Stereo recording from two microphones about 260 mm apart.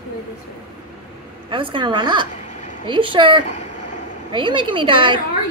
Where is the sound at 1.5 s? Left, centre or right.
Centre.